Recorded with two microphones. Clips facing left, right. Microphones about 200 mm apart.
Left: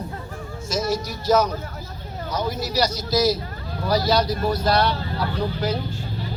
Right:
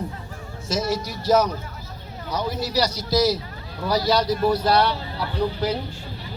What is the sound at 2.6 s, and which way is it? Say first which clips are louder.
A man's voice: even; 30° right (ahead or behind).